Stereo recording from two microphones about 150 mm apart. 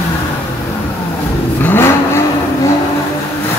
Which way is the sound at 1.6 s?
15° left (ahead or behind).